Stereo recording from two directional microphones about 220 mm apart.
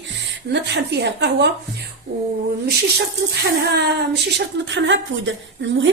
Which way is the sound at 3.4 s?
50° right (ahead or behind).